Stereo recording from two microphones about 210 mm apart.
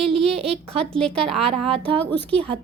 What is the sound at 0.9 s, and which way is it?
Speech, 5° left (ahead or behind).